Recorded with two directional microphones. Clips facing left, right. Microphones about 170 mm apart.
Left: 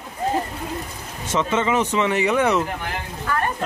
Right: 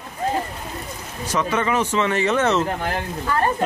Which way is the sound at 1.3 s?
20° left (ahead or behind).